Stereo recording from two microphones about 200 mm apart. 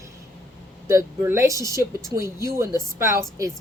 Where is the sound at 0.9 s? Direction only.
15° right (ahead or behind).